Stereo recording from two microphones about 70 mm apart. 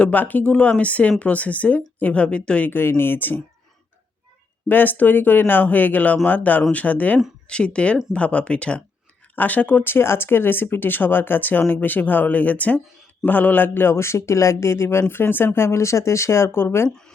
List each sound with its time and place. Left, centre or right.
0.0 s speech: left
4.7 s a man's voice: left